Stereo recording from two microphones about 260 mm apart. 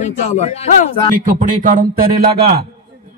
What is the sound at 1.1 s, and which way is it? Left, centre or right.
A man's voice, right.